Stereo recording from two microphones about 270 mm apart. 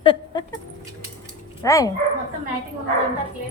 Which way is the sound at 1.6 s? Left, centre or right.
Centre.